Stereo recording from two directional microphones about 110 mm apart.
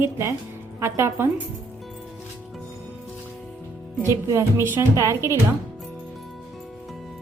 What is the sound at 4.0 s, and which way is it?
A woman's voice, 30° right (ahead or behind).